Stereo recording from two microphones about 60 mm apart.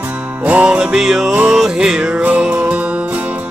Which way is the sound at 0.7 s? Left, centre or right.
Centre.